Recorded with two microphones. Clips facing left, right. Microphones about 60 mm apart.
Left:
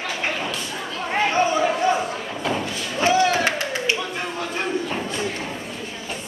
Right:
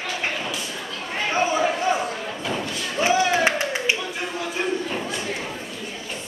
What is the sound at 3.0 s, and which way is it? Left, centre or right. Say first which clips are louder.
Clapping: left 1 dB; centre.